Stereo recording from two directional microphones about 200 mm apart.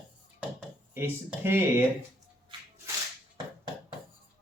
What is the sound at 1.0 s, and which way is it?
Speech, 10° right (ahead or behind).